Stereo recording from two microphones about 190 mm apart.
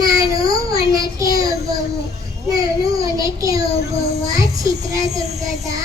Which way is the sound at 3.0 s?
20° right (ahead or behind).